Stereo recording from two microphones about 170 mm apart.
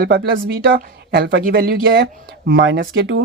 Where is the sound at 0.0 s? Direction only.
75° right (ahead or behind).